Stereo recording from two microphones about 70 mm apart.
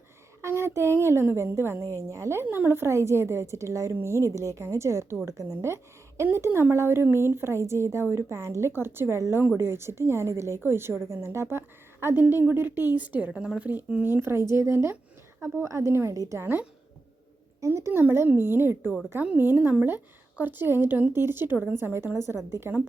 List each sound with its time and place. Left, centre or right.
0.4 s a woman's voice: right; by 13.7 s centre
14.0 s a woman's voice: right
16.1 s a woman's voice: right
17.7 s a woman's voice: right